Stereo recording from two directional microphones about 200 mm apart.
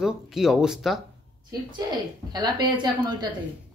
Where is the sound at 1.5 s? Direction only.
20° right (ahead or behind).